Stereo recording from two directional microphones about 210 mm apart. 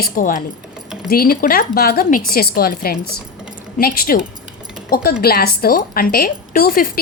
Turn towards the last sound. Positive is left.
turn(degrees=45)  # may be behind; listen again after turning